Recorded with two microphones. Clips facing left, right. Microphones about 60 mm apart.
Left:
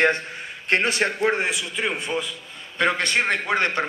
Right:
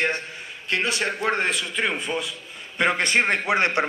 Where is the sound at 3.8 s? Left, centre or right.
Centre.